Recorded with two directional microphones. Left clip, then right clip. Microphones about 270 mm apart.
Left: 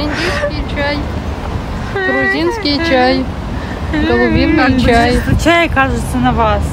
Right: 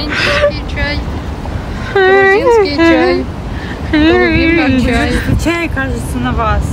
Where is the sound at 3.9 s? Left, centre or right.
Centre.